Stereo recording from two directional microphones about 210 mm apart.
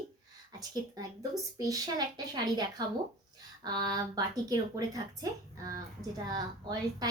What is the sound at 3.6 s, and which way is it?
A woman's voice, 20° right (ahead or behind).